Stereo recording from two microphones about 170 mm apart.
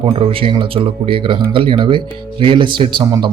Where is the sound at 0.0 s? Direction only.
30° right (ahead or behind).